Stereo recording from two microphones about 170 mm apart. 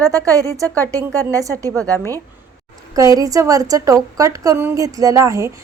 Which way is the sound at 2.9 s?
20° right (ahead or behind).